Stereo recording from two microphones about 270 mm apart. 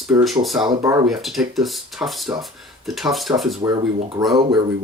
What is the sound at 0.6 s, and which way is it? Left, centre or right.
Speech, centre.